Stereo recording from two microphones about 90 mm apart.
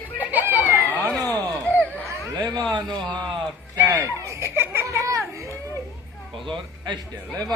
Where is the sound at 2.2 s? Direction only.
35° right (ahead or behind).